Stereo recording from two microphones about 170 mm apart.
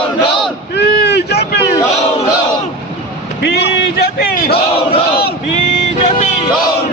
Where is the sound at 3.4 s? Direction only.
80° left; by 4.5 s 65° left (ahead or behind).